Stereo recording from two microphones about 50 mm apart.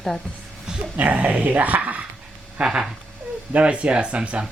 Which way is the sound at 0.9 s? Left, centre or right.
Right.